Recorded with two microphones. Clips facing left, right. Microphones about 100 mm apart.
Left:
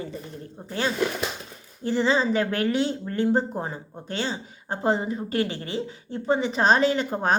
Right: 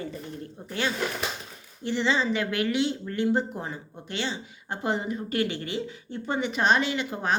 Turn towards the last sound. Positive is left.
turn(degrees=45)  # may be behind; listen again after turning